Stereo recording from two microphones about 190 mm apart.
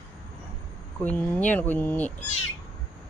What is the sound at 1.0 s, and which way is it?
Speech, 10° left (ahead or behind).